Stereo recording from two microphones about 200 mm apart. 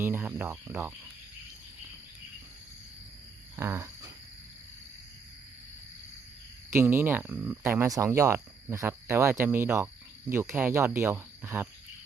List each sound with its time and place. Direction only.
0.0 s speech: 10° right (ahead or behind)
3.5 s a sound: 10° right (ahead or behind)
6.7 s speech: 15° right (ahead or behind)